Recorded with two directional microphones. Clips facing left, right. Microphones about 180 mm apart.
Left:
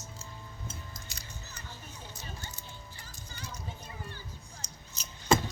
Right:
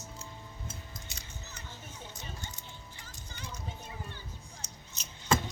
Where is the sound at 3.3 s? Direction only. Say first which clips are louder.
Even; 20° right (ahead or behind).